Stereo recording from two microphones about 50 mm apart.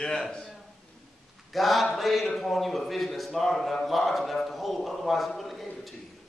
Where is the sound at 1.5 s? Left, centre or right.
Centre.